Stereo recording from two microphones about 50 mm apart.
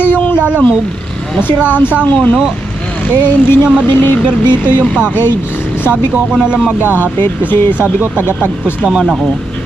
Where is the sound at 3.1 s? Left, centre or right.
Left.